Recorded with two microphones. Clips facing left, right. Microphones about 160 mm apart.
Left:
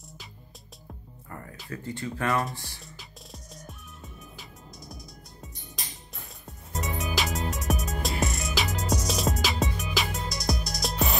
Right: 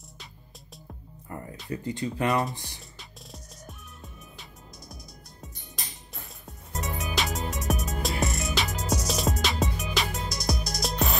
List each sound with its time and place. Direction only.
1.3 s music: 20° right (ahead or behind)
1.7 s speech: 20° right (ahead or behind)
3.0 s music: centre (ahead or behind)
6.1 s music: centre (ahead or behind)